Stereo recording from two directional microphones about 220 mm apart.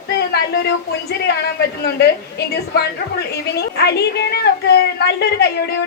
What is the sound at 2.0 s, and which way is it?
A woman's voice, 45° left (ahead or behind).